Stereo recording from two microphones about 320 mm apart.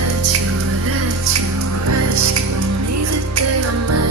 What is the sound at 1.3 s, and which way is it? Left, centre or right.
Music, right.